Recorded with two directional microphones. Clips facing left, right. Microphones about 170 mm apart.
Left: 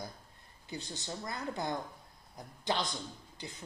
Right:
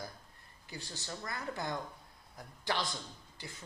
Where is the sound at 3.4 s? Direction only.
20° left (ahead or behind).